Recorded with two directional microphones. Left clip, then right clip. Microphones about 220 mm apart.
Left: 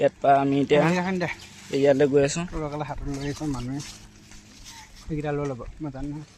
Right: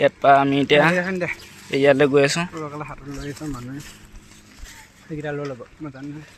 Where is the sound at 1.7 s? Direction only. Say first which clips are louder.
Right 4 dB; centre (ahead or behind).